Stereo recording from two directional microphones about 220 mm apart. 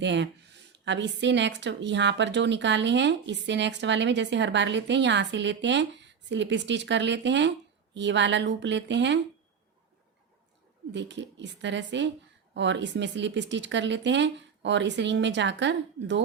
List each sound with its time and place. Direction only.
0.0 s a woman's voice: 55° right (ahead or behind)
10.9 s a woman's voice: 55° right (ahead or behind)